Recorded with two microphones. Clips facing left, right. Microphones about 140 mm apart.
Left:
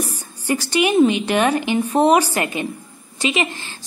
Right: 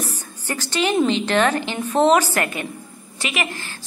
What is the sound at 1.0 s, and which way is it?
A woman's voice, 15° left (ahead or behind).